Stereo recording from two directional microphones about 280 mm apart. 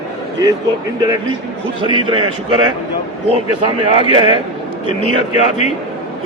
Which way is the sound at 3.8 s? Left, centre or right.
Centre.